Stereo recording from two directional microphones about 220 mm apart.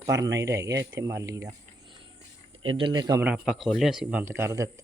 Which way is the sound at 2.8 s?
20° right (ahead or behind).